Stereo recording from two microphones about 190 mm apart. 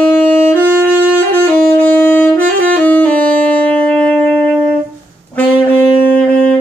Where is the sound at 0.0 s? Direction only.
10° left (ahead or behind).